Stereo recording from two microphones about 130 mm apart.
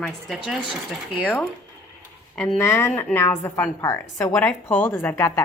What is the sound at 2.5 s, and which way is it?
A woman's voice, 20° left (ahead or behind).